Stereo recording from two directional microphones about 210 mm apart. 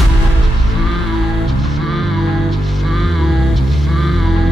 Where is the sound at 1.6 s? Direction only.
Centre (ahead or behind).